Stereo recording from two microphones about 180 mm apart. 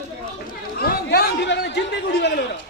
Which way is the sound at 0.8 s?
60° left (ahead or behind).